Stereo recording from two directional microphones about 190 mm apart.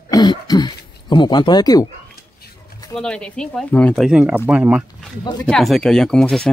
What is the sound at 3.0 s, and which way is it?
Speech, 5° left (ahead or behind).